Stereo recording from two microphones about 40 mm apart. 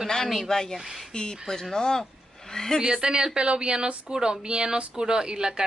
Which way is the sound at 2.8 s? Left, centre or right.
Centre.